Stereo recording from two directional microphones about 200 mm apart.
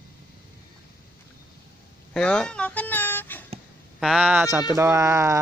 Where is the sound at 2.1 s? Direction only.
5° left (ahead or behind).